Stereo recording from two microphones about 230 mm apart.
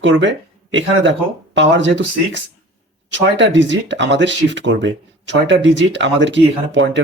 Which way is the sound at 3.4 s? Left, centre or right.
Right.